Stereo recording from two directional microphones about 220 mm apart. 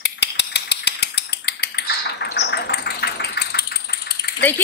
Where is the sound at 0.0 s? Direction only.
50° left (ahead or behind).